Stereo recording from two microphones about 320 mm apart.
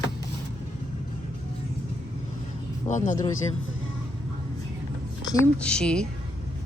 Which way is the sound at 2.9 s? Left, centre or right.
Left.